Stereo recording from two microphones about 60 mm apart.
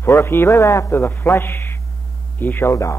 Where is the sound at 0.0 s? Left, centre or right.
Left.